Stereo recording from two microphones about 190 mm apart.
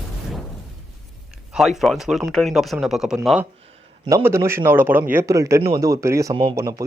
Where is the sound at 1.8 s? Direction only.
Centre (ahead or behind).